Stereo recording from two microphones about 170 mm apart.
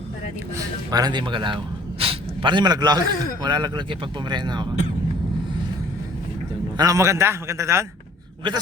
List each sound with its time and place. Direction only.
0.5 s speech: 20° right (ahead or behind)
6.7 s a man's voice: 20° right (ahead or behind)